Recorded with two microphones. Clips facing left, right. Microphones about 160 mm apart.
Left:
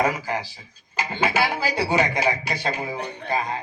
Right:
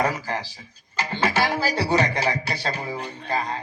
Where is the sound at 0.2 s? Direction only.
15° left (ahead or behind).